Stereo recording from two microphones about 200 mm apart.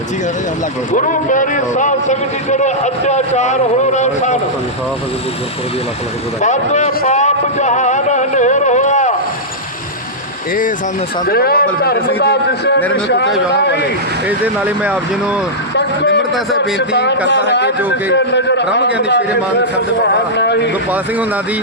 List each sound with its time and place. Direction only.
0.9 s a man's voice: 40° left (ahead or behind)
6.4 s a sound: 35° left (ahead or behind)
11.3 s a man's voice: 50° left (ahead or behind)
14.3 s speech: 10° right (ahead or behind)
15.7 s vehicle: 60° left (ahead or behind)
16.7 s a man's voice: 60° left (ahead or behind)